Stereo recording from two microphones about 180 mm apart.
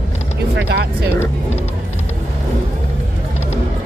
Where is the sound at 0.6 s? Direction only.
65° right (ahead or behind).